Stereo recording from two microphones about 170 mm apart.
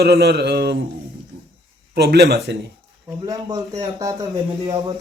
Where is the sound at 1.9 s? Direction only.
75° right (ahead or behind).